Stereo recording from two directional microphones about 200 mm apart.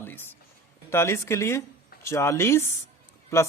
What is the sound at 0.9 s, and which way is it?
Speech, 15° left (ahead or behind).